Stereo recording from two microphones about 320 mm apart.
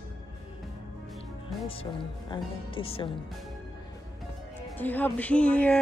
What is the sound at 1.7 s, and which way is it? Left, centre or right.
Speech, centre.